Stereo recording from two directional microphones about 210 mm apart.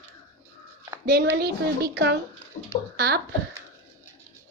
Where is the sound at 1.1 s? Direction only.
50° right (ahead or behind).